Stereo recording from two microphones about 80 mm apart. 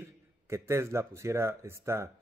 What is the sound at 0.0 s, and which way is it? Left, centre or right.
Speech, right.